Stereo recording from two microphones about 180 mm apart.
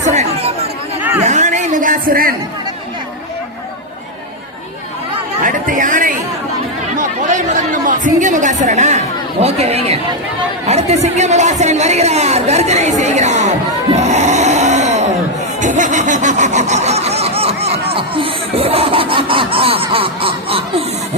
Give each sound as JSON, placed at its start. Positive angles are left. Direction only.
{"t": 0.0, "sound": "chatter", "side_deg": -40}
{"t": 1.2, "sound": "a sound", "side_deg": -40}
{"t": 5.4, "sound": "chatter", "side_deg": -45}
{"t": 9.4, "sound": "speech", "side_deg": -35}
{"t": 10.7, "sound": "chatter", "side_deg": -35}
{"t": 15.6, "sound": "a sound", "side_deg": -45}